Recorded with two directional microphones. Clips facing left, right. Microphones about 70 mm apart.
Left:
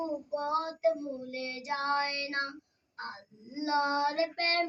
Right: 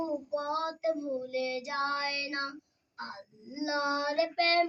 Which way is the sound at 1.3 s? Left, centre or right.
Left.